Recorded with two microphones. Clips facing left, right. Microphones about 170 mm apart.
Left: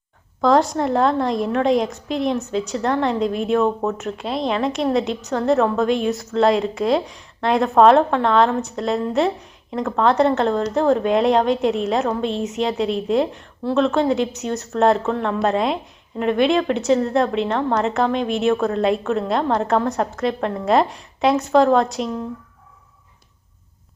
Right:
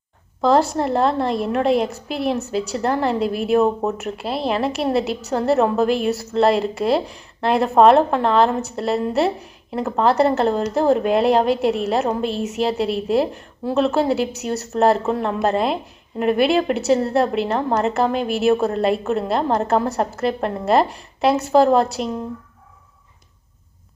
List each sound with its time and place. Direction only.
0.4 s a woman's voice: 5° right (ahead or behind)